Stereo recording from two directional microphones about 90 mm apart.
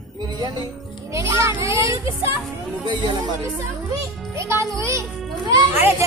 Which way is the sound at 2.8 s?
60° right (ahead or behind).